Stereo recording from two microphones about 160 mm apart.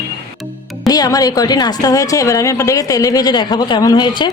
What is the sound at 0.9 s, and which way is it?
A woman's voice, 25° left (ahead or behind).